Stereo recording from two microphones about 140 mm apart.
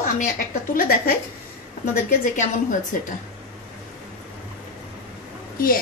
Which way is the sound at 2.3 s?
65° left (ahead or behind).